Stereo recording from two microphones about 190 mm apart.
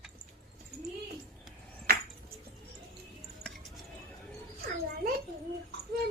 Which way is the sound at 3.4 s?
Centre (ahead or behind).